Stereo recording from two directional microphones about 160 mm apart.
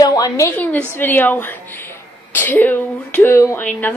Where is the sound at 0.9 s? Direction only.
10° left (ahead or behind).